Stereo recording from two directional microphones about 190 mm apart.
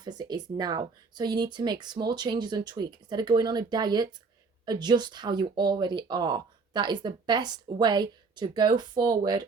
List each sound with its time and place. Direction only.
0.0 s speech: 20° right (ahead or behind)